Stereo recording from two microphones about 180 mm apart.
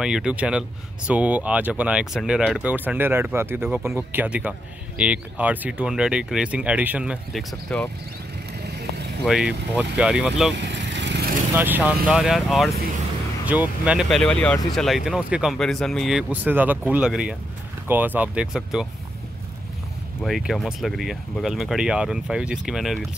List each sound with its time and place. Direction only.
0.0 s speech: 5° right (ahead or behind)
7.7 s speech: 5° left (ahead or behind)
9.2 s speech: centre (ahead or behind)
10.5 s vehicle: 75° right (ahead or behind)
11.5 s speech: 10° right (ahead or behind)
20.2 s speech: centre (ahead or behind)